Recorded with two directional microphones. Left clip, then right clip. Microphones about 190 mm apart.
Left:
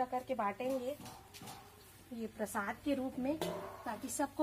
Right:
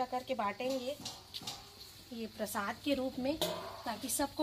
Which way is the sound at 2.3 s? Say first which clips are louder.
Right 1 dB; 5° right (ahead or behind).